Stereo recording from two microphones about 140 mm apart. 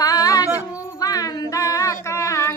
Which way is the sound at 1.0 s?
25° left (ahead or behind).